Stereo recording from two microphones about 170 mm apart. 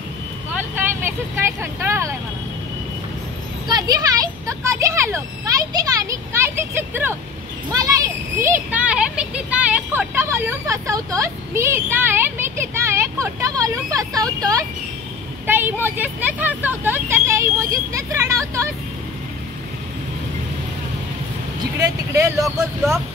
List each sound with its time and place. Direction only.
0.6 s vehicle: 10° right (ahead or behind)
1.6 s speech: 15° right (ahead or behind)
3.6 s speech: 25° right (ahead or behind)
8.4 s speech: 10° right (ahead or behind)
21.7 s speech: 20° right (ahead or behind)